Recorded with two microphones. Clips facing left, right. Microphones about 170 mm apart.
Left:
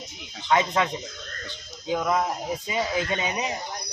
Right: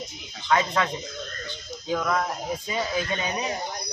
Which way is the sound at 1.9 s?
15° left (ahead or behind).